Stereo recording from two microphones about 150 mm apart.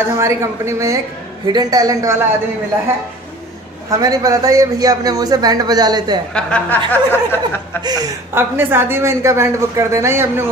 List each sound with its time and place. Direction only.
0.0 s a man's voice: 20° right (ahead or behind)
4.0 s a man's voice: 25° right (ahead or behind)
6.3 s speech: 5° left (ahead or behind)
7.8 s a man's voice: 25° right (ahead or behind)
8.4 s a man's voice: 15° right (ahead or behind)